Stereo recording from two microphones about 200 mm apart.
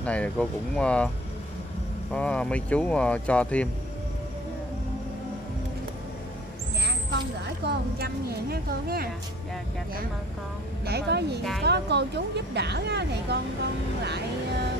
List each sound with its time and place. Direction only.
0.0 s speech: 5° left (ahead or behind)
2.1 s speech: 5° left (ahead or behind)
6.8 s speech: 55° right (ahead or behind)
10.9 s speech: 55° right (ahead or behind)